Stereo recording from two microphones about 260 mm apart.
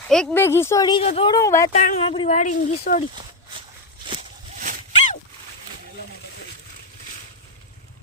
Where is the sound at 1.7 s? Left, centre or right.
Left.